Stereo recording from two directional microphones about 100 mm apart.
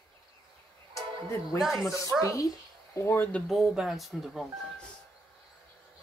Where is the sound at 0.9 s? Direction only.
30° left (ahead or behind).